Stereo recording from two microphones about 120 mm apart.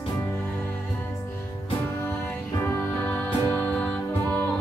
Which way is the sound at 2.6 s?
20° left (ahead or behind).